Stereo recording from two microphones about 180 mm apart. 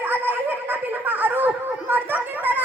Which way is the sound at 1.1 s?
10° right (ahead or behind).